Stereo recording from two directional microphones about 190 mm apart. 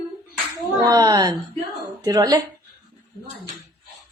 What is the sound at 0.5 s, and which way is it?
Speech, 15° right (ahead or behind).